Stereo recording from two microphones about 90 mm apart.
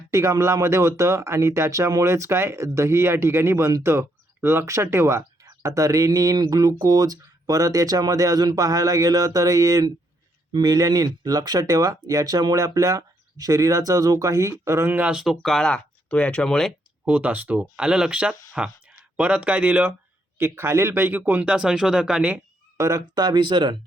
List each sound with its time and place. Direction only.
0.1 s speech: 35° right (ahead or behind)
14.9 s speech: 10° right (ahead or behind); by 16.7 s 5° left (ahead or behind)
17.1 s speech: 15° right (ahead or behind)
20.4 s speech: 30° right (ahead or behind); by 22.4 s 10° right (ahead or behind)
22.8 s speech: 40° right (ahead or behind); by 23.7 s 65° right (ahead or behind)